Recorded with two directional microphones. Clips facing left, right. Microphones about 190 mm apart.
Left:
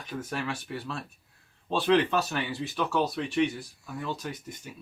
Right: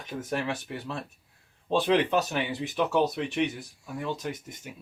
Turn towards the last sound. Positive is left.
turn(degrees=-15)  # may be behind; listen again after turning